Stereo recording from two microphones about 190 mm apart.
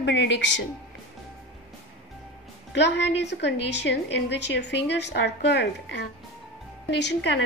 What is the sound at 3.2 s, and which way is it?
A woman's voice, 65° left (ahead or behind).